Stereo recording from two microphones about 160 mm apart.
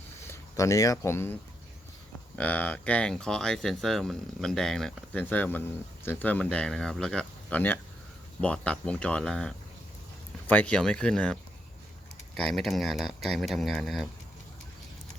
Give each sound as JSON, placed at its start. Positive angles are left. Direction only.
{"t": 0.2, "sound": "speech", "side_deg": 20}
{"t": 12.4, "sound": "speech", "side_deg": 0}